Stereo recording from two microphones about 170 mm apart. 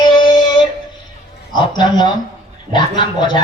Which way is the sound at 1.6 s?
25° left (ahead or behind).